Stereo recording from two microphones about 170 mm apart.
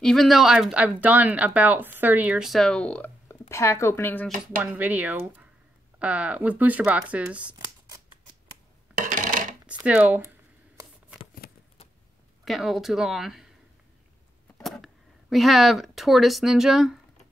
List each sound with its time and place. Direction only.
0.0 s a woman's voice: centre (ahead or behind)
4.6 s speech: 10° right (ahead or behind)
9.0 s a sound: 50° right (ahead or behind)
9.8 s speech: 10° right (ahead or behind)
11.4 s a sound: 60° left (ahead or behind)
12.4 s a woman's voice: centre (ahead or behind)
14.6 s speech: centre (ahead or behind)